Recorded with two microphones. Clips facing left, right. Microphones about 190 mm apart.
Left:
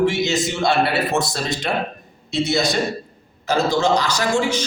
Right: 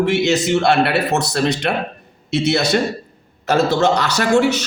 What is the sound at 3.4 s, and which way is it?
A man's voice, 65° right (ahead or behind).